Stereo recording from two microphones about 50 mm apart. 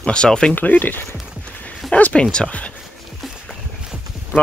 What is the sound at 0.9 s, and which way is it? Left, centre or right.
Speech, left.